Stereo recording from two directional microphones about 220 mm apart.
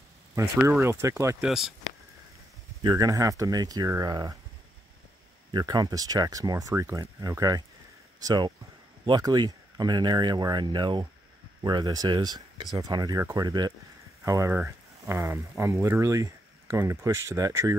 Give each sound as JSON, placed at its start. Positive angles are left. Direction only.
{"t": 0.4, "sound": "speech", "side_deg": -15}
{"t": 2.8, "sound": "speech", "side_deg": -15}
{"t": 5.5, "sound": "speech", "side_deg": -20}